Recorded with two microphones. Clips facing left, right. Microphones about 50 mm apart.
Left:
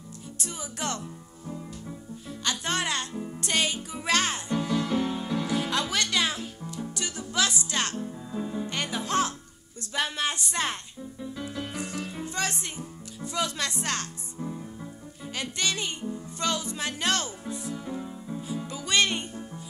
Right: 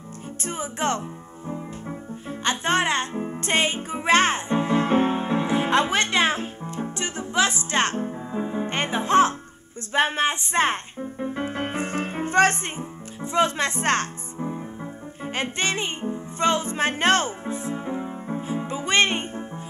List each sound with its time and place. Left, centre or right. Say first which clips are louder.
0.4 s speech: right 8 dB; right
1.5 s music: right 6 dB; right
13.2 s speech: right 8 dB; right
15.2 s music: right 5 dB; right